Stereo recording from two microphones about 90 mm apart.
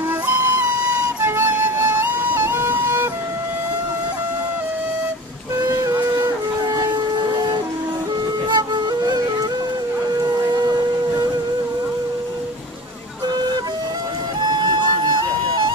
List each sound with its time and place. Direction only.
0.3 s music: 20° right (ahead or behind)
1.8 s music: 35° right (ahead or behind)
2.5 s music: 20° right (ahead or behind)
5.6 s music: 35° right (ahead or behind)
6.2 s shofar: 45° right (ahead or behind)
8.5 s music: 50° right (ahead or behind)
10.4 s a sound: 45° right (ahead or behind)
14.5 s music: 55° right (ahead or behind)